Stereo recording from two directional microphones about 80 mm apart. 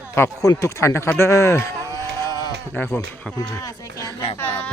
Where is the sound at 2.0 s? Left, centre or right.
Right.